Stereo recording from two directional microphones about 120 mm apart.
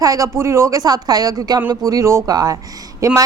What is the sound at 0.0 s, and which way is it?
A woman's voice, 30° right (ahead or behind).